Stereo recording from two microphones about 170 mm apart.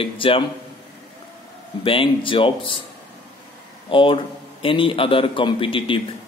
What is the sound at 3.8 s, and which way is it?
A man's voice, 30° left (ahead or behind).